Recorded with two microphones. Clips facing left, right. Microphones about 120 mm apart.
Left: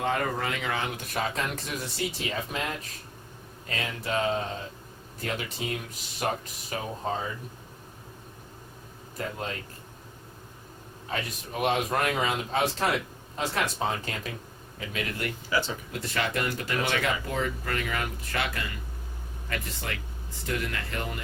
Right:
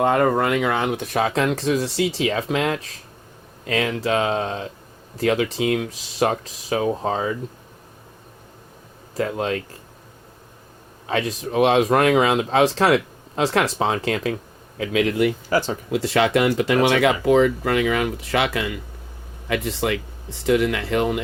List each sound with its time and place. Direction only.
0.0 s speech: 55° right (ahead or behind); by 7.3 s 90° right
9.1 s speech: 90° right
11.0 s speech: 90° right
15.4 s speech: 40° right (ahead or behind)
15.9 s speech: 90° right